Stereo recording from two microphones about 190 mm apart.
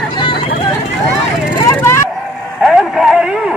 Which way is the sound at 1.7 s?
15° left (ahead or behind).